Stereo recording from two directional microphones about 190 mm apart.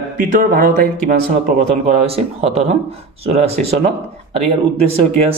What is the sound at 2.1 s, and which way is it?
Speech, 30° right (ahead or behind).